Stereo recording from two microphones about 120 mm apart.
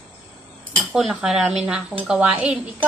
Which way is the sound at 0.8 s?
Centre (ahead or behind).